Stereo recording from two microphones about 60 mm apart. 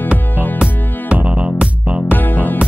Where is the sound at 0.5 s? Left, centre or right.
Right.